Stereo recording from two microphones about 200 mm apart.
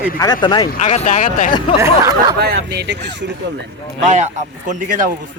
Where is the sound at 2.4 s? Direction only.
55° right (ahead or behind).